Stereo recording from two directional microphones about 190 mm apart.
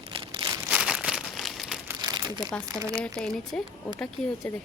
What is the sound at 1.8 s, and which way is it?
Crumpling, 20° right (ahead or behind).